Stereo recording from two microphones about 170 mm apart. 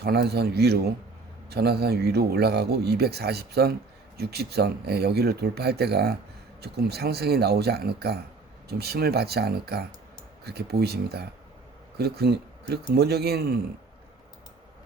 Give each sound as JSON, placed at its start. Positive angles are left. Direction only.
{"t": 0.0, "sound": "speech", "side_deg": -70}